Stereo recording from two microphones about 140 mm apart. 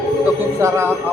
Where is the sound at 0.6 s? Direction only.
20° right (ahead or behind).